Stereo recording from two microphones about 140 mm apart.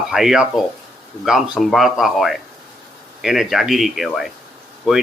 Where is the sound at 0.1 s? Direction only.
5° right (ahead or behind).